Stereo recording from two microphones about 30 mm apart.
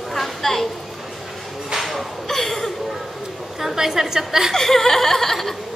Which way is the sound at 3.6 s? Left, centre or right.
Centre.